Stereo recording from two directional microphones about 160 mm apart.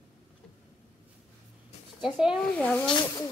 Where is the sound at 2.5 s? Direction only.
10° left (ahead or behind).